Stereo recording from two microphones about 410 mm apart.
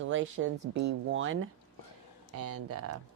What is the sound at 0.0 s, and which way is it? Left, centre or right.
Speech, right.